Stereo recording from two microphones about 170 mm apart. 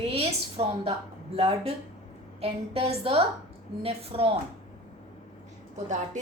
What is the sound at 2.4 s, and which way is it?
Speech, 35° right (ahead or behind).